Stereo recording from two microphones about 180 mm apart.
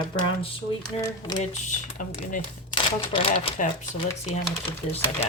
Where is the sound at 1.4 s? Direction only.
40° left (ahead or behind).